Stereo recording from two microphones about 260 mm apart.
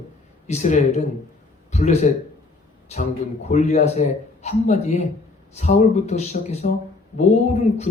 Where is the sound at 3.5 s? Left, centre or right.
Left.